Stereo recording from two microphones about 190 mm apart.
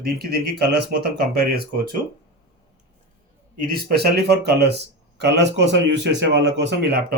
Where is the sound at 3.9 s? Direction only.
55° right (ahead or behind).